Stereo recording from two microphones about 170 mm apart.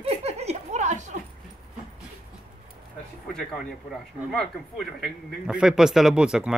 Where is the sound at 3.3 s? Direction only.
Centre (ahead or behind).